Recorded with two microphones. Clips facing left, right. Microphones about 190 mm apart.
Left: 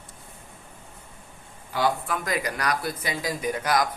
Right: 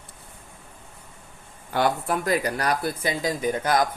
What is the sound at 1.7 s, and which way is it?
Speech, 60° right (ahead or behind).